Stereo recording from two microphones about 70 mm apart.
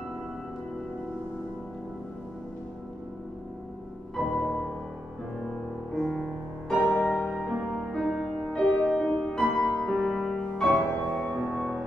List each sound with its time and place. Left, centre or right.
5.4 s music: centre
10.7 s music: centre
11.2 s music: centre